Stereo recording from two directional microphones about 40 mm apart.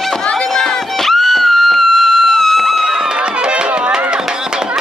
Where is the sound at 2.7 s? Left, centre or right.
Centre.